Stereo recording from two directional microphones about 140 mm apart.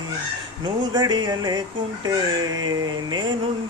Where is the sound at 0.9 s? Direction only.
30° right (ahead or behind).